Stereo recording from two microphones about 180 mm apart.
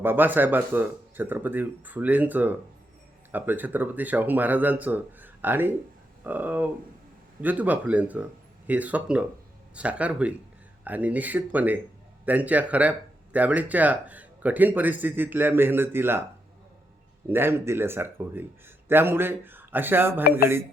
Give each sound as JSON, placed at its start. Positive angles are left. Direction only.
{"t": 0.0, "sound": "speech", "side_deg": -10}
{"t": 17.2, "sound": "speech", "side_deg": -10}